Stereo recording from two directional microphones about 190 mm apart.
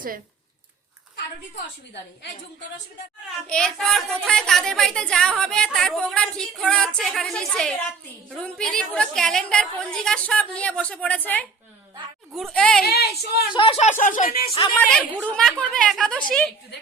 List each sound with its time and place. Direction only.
3.4 s speech: 5° left (ahead or behind)
12.3 s speech: centre (ahead or behind)
12.8 s speech: 55° left (ahead or behind)
13.5 s speech: 25° left (ahead or behind)
14.0 s speech: 45° left (ahead or behind)
14.8 s speech: 5° left (ahead or behind)